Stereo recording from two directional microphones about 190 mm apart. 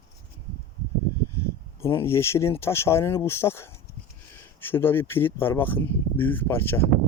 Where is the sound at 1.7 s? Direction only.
15° left (ahead or behind).